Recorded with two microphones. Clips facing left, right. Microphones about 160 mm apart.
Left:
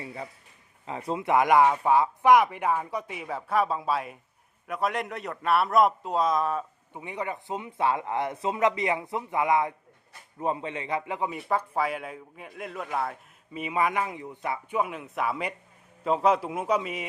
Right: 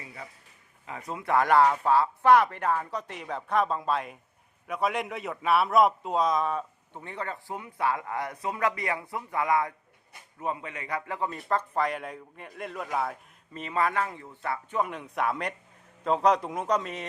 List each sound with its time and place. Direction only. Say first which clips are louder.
0.0 s a sound: left 6 dB; 30° left (ahead or behind)
0.9 s a man's voice: left 3 dB; 30° left (ahead or behind); by 7.0 s centre (ahead or behind)
7.0 s speech: left 3 dB; 15° left (ahead or behind)
13.6 s a man's voice: left 1 dB; 10° left (ahead or behind)